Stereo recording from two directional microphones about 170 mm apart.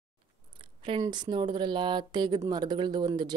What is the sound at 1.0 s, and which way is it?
Speech, 25° right (ahead or behind).